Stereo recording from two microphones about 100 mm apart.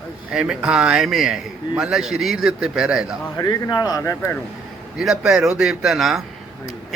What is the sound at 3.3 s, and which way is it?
Speech, 40° left (ahead or behind).